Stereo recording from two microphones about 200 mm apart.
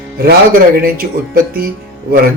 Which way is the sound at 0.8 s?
45° right (ahead or behind).